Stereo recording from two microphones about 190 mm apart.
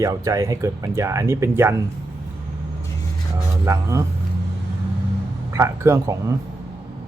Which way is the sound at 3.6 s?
15° right (ahead or behind).